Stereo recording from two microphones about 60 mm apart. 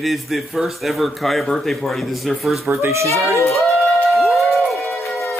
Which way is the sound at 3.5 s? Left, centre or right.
Centre.